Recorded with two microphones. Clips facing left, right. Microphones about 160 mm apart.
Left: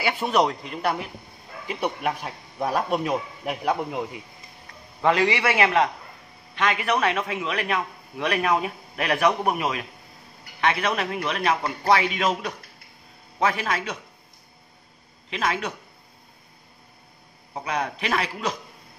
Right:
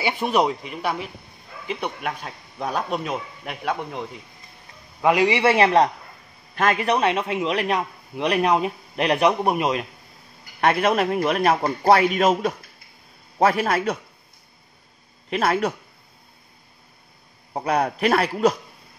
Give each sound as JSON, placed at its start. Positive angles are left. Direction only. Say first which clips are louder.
{"t": 0.0, "sound": "a man's voice", "louder": "right 1 dB", "side_deg": -15}
{"t": 5.0, "sound": "speech", "louder": "right 2 dB", "side_deg": -15}
{"t": 5.4, "sound": "speech", "louder": "right 4 dB", "side_deg": -30}
{"t": 6.5, "sound": "speech", "louder": "right 3 dB", "side_deg": -45}
{"t": 10.6, "sound": "a man's voice", "louder": "right 5 dB", "side_deg": -50}
{"t": 15.2, "sound": "speech", "louder": "right 6 dB", "side_deg": -45}
{"t": 17.6, "sound": "a man's voice", "louder": "right 6 dB", "side_deg": -55}